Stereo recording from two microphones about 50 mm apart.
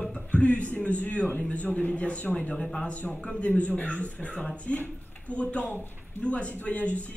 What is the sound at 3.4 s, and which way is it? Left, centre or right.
Speech, left.